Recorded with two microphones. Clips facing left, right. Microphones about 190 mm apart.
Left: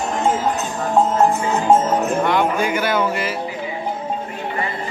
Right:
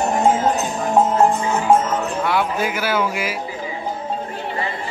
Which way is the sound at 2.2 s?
5° right (ahead or behind).